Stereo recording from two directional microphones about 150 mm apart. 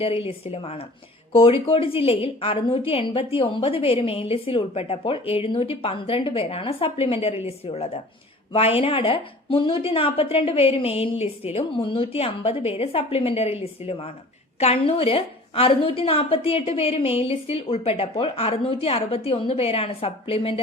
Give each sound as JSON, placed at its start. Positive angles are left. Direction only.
{"t": 0.0, "sound": "a woman's voice", "side_deg": 40}